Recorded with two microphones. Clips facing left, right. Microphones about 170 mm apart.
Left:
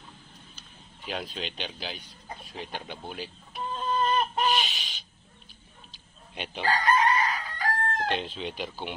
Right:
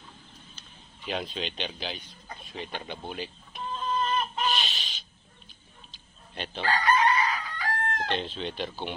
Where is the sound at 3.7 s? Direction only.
35° left (ahead or behind).